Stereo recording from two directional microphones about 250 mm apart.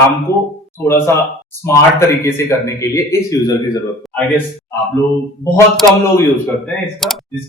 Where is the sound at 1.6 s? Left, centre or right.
Centre.